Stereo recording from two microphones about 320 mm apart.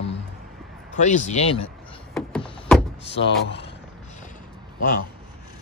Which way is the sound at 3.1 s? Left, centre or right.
Left.